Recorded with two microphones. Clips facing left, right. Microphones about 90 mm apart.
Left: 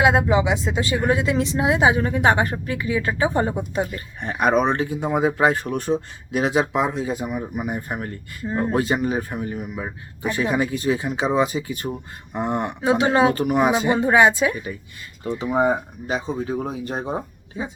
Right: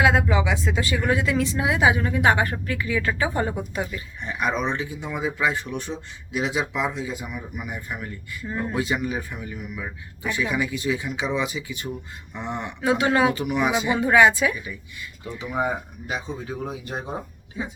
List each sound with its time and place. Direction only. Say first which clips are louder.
0.0 s speech: left 3 dB; 25° left (ahead or behind)
3.9 s speech: left 3 dB; 55° left (ahead or behind)
8.4 s speech: left 5 dB; 30° left (ahead or behind)
8.7 s speech: left 4 dB; 45° left (ahead or behind)
12.8 s speech: left 2 dB; 20° left (ahead or behind)
13.3 s speech: left 4 dB; 45° left (ahead or behind)
14.0 s speech: even; 25° left (ahead or behind)
14.5 s speech: left 4 dB; 45° left (ahead or behind)
15.4 s speech: left 6 dB; 30° left (ahead or behind)